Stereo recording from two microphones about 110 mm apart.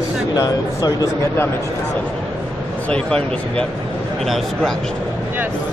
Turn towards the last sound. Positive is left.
turn(degrees=0)  # may be behind; listen again after turning